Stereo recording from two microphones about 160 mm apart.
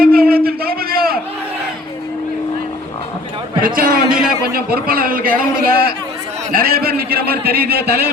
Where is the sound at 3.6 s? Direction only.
60° right (ahead or behind).